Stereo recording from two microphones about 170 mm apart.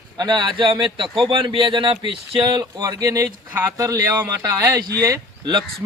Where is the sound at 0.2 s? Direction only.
25° right (ahead or behind).